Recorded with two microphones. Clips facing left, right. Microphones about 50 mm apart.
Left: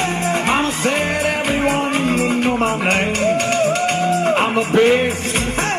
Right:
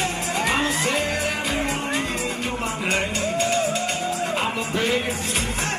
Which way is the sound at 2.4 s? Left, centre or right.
Left.